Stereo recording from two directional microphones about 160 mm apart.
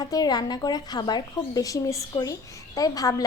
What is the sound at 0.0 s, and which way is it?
A woman's voice, 25° left (ahead or behind).